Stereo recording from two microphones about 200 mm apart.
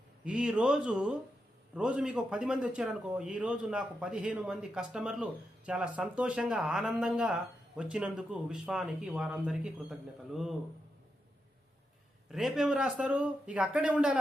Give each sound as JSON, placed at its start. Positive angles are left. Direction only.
{"t": 0.3, "sound": "a man's voice", "side_deg": -5}
{"t": 12.3, "sound": "a man's voice", "side_deg": 0}